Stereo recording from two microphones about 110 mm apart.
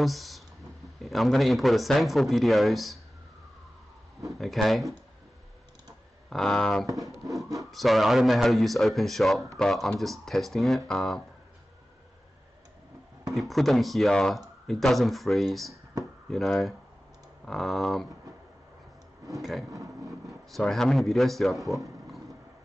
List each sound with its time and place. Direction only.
0.0 s speech: centre (ahead or behind)
4.3 s speech: centre (ahead or behind)
6.3 s speech: 5° left (ahead or behind)
13.3 s speech: centre (ahead or behind)
19.3 s speech: centre (ahead or behind)
19.7 s vehicle: 30° right (ahead or behind)
20.2 s speech: centre (ahead or behind)